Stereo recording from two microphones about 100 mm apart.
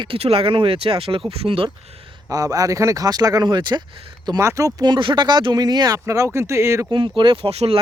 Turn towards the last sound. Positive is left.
turn(degrees=-80)